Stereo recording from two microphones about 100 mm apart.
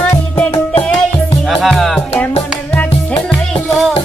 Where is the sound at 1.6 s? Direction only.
Centre (ahead or behind).